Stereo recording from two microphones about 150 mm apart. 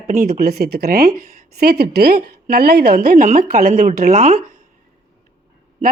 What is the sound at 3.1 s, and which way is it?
Speech, 55° right (ahead or behind).